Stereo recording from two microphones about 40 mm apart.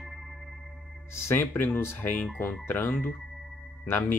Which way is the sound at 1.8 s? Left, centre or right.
Left.